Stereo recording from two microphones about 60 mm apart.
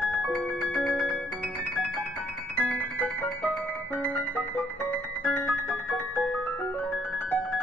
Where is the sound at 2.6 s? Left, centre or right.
Centre.